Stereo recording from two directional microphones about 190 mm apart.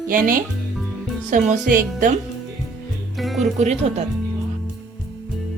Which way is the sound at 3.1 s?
Centre (ahead or behind).